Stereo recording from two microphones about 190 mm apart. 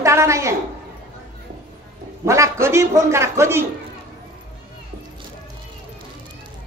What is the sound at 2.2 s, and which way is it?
A man's voice, 15° right (ahead or behind).